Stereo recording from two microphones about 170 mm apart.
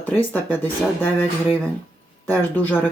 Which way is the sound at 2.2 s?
10° left (ahead or behind).